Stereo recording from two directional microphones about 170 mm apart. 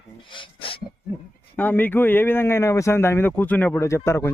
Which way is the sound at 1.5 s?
10° left (ahead or behind).